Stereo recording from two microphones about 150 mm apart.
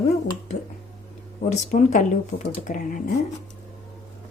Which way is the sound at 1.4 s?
55° left (ahead or behind).